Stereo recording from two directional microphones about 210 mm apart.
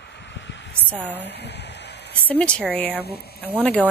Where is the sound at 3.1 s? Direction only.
50° left (ahead or behind).